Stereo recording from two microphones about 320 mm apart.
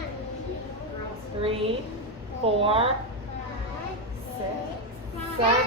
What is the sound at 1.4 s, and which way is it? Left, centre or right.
A woman's voice, centre.